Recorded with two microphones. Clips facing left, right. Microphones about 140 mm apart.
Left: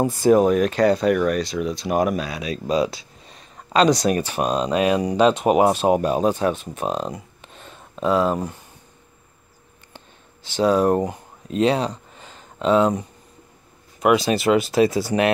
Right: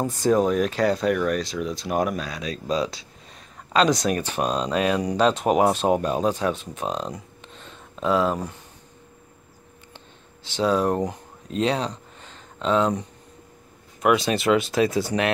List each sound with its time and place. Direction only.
0.0 s speech: 10° left (ahead or behind)
9.9 s a sound: centre (ahead or behind)
14.0 s speech: 5° left (ahead or behind)